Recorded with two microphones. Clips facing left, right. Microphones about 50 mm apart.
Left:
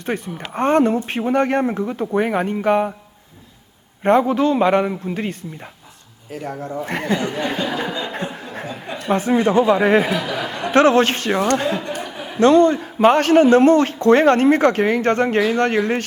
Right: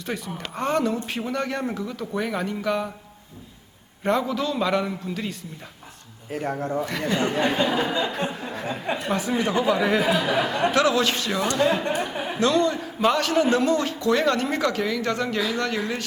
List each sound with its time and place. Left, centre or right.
0.0 s a man's voice: left
4.0 s a man's voice: left
6.3 s speech: right
6.8 s a man's voice: left
7.2 s speech: right
8.6 s a sound: right
9.0 s a man's voice: left
10.2 s speech: right
10.7 s a man's voice: left
11.7 s speech: right
11.9 s chuckle: centre
12.4 s a man's voice: left